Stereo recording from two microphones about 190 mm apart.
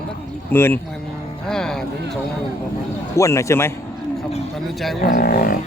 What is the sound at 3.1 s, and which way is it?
Speech, 15° left (ahead or behind).